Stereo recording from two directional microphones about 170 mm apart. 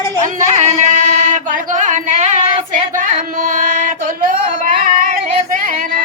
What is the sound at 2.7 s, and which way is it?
Female singing, 50° right (ahead or behind).